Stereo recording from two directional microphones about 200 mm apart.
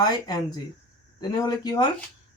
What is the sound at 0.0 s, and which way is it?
Speech, 20° left (ahead or behind).